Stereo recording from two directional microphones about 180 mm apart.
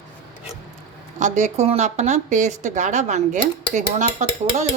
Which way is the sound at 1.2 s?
40° right (ahead or behind).